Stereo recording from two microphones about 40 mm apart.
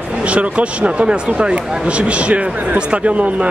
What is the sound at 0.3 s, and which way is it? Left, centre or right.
Speech, right.